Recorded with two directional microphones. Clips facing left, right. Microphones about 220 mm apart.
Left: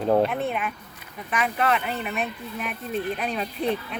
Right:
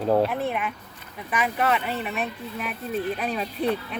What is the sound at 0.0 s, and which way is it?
Speech, 5° right (ahead or behind).